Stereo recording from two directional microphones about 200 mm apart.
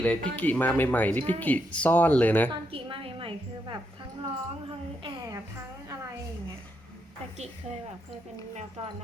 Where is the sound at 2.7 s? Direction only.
25° right (ahead or behind).